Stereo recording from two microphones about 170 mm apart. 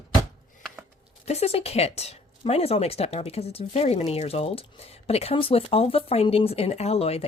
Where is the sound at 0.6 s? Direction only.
Centre (ahead or behind).